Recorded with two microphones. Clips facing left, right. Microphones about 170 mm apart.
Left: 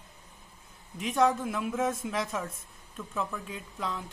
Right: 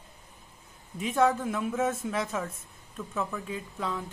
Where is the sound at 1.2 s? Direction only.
5° right (ahead or behind).